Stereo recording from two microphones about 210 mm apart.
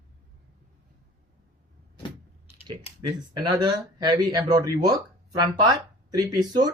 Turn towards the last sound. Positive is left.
turn(degrees=-20)  # may be behind; listen again after turning